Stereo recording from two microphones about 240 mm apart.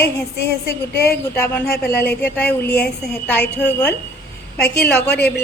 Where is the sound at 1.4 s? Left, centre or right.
Centre.